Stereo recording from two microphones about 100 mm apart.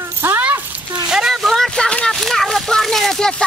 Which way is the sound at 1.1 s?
5° right (ahead or behind).